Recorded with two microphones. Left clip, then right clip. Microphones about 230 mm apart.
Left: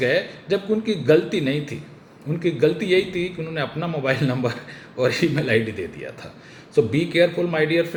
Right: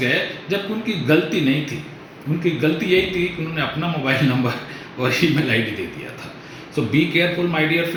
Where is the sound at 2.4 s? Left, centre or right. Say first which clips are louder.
Left 1 dB; left.